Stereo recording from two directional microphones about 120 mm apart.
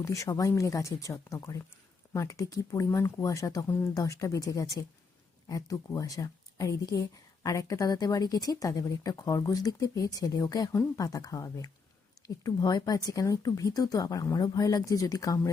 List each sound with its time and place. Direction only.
0.0 s speech: 25° left (ahead or behind)